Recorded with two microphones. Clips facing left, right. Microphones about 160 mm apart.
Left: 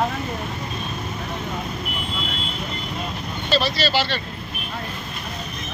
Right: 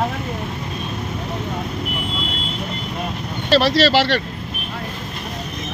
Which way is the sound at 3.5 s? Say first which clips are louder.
Right 7 dB; 80° right.